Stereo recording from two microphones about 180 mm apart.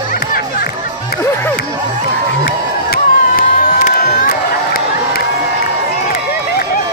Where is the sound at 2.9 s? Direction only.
50° left (ahead or behind).